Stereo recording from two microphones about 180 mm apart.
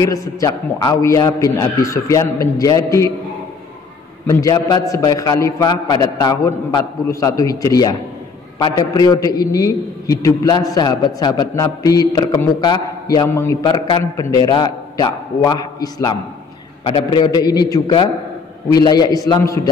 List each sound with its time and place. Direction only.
0.0 s a man's voice: 20° left (ahead or behind)
4.3 s a man's voice: 20° left (ahead or behind)